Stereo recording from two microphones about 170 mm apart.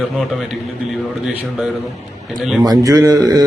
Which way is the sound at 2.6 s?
20° right (ahead or behind).